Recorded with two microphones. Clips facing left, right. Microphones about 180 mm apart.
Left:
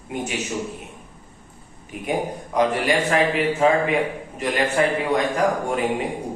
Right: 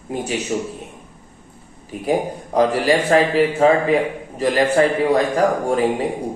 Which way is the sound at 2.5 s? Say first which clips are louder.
Right 4 dB; 35° right (ahead or behind).